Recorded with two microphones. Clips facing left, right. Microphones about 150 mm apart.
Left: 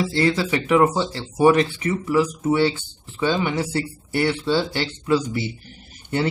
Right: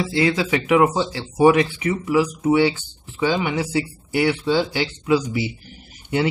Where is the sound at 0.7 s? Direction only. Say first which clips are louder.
Even; 10° right (ahead or behind).